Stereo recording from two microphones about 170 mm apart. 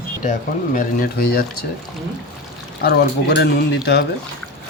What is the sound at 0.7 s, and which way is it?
Speech, 55° left (ahead or behind).